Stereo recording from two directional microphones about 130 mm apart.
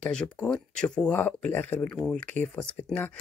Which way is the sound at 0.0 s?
10° left (ahead or behind).